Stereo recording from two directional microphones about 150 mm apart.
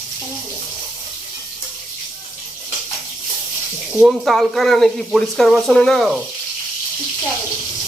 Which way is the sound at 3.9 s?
5° right (ahead or behind).